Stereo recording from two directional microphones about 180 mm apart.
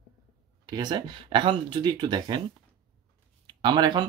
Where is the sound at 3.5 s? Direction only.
25° right (ahead or behind).